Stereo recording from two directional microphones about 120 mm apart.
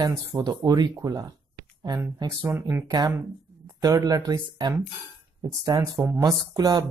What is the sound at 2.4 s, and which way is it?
Speech, 20° right (ahead or behind).